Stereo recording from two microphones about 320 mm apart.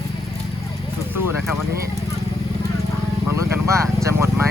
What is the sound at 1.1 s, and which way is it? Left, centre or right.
Vehicle, centre.